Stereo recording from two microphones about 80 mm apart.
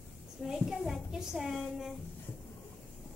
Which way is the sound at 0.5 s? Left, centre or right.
Centre.